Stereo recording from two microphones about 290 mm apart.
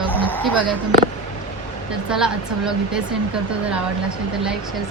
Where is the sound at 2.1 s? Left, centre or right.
Centre.